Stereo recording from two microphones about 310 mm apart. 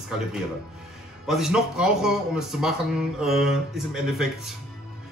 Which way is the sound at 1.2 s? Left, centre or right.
Centre.